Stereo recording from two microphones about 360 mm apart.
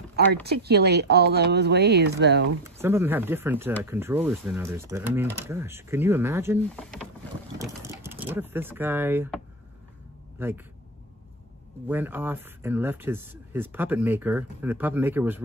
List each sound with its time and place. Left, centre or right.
0.1 s speech: right
2.6 s speech: centre
10.4 s speech: centre
11.9 s speech: centre